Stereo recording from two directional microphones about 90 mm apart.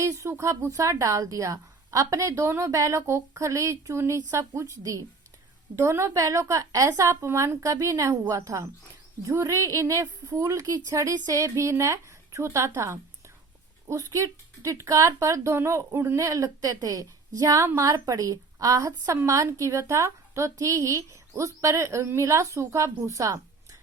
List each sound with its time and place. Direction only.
0.0 s a woman's voice: 35° right (ahead or behind)
16.2 s a woman's voice: 40° right (ahead or behind)